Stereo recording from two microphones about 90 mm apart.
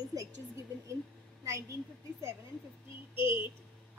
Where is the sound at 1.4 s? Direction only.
35° right (ahead or behind).